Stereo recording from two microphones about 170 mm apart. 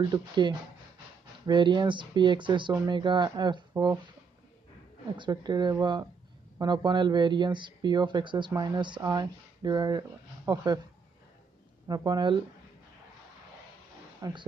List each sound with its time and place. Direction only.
0.1 s speech: 25° right (ahead or behind)
3.7 s speech: 15° right (ahead or behind)
5.1 s speech: 25° right (ahead or behind)
11.9 s speech: 25° right (ahead or behind)
14.2 s speech: 20° right (ahead or behind)